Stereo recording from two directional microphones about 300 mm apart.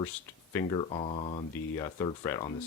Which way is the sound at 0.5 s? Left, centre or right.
Centre.